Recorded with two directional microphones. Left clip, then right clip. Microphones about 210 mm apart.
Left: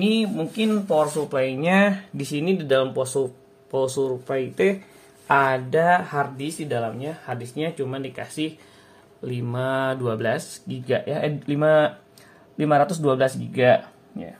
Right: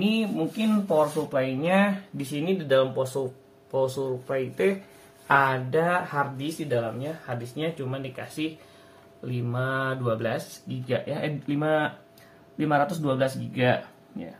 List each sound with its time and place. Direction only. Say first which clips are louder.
0.0 s speech: left 3 dB; 45° left (ahead or behind)